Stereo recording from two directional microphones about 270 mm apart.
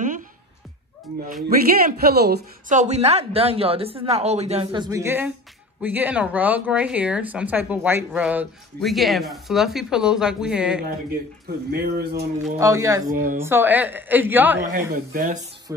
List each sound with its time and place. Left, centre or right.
1.9 s a woman's voice: right; by 10.8 s centre
11.7 s speech: right
12.5 s a woman's voice: centre
13.1 s speech: right
13.4 s a woman's voice: centre
14.7 s a woman's voice: right